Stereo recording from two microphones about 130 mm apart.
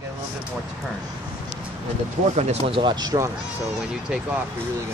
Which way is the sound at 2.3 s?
55° right (ahead or behind).